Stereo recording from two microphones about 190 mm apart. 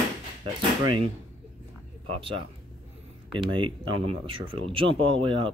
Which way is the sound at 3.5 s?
25° right (ahead or behind).